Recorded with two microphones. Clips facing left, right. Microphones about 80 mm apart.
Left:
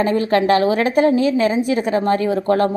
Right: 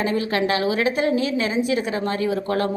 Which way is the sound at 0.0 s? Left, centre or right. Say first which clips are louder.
Left 6 dB; left.